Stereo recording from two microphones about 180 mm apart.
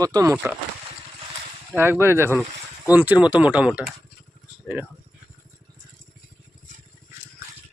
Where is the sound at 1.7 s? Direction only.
10° right (ahead or behind).